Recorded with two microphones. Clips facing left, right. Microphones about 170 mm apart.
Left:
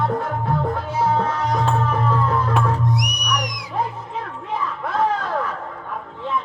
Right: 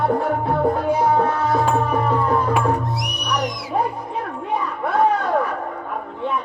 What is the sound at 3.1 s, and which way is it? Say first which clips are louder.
Music: right 1 dB; 15° left (ahead or behind).